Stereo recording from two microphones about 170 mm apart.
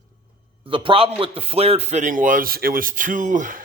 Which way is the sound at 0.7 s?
30° right (ahead or behind).